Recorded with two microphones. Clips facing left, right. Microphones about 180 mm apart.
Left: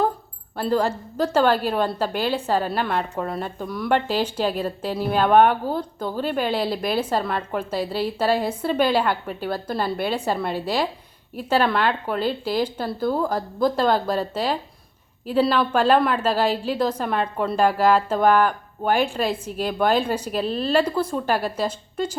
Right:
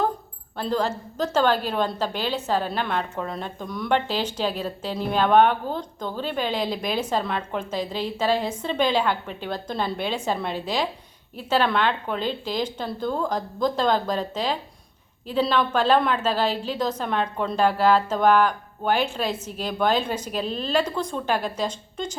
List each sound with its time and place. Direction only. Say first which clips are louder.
0.5 s a woman's voice: left 3 dB; 10° left (ahead or behind)